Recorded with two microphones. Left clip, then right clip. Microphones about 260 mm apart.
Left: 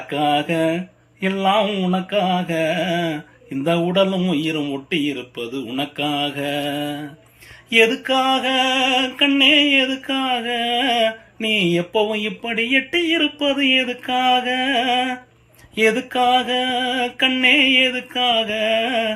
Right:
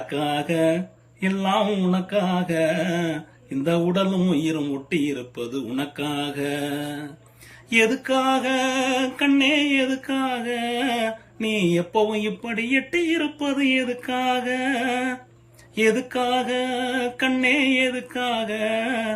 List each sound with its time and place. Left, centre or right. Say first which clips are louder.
0.1 s music: left 6 dB; centre